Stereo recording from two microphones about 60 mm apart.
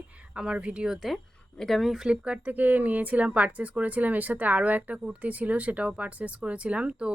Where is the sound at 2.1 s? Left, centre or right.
Right.